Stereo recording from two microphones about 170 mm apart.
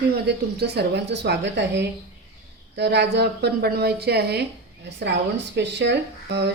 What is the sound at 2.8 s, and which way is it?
A woman's voice, 80° right.